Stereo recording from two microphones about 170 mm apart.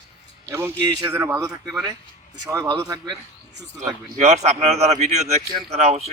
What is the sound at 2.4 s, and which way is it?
Speech, 20° right (ahead or behind).